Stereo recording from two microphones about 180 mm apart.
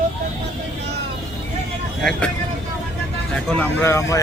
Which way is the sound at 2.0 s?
5° left (ahead or behind).